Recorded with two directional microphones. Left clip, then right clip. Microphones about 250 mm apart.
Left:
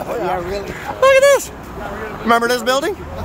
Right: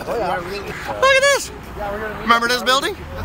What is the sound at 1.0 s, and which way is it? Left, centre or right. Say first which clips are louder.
Speech: left 4 dB; centre.